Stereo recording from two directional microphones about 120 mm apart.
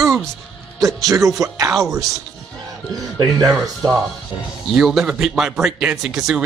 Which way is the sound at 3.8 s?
35° right (ahead or behind).